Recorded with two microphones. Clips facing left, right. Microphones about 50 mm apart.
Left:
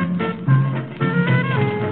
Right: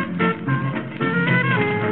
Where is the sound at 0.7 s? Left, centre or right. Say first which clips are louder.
Even; centre.